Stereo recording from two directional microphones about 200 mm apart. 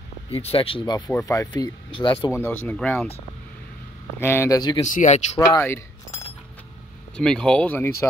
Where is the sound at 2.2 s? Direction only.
10° left (ahead or behind).